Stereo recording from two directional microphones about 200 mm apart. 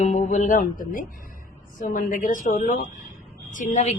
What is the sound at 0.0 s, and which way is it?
A woman's voice, 35° left (ahead or behind).